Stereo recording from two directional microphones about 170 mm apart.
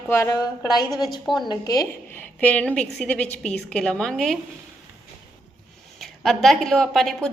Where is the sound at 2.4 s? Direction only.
10° left (ahead or behind).